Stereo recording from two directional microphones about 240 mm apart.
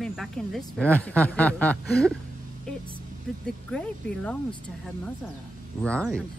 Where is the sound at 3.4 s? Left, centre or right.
Centre.